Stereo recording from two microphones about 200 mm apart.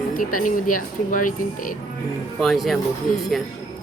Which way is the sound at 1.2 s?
40° left (ahead or behind).